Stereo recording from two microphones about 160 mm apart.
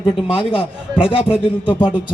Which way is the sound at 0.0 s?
35° left (ahead or behind).